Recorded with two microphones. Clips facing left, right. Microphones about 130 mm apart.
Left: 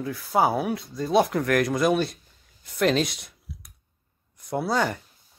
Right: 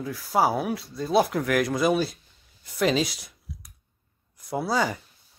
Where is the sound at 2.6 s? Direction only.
Centre (ahead or behind).